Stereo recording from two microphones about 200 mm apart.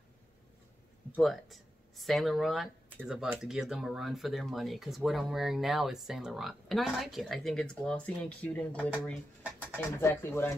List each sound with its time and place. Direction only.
1.1 s speech: centre (ahead or behind)